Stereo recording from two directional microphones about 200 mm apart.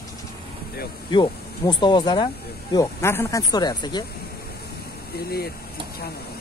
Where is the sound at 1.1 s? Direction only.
25° left (ahead or behind).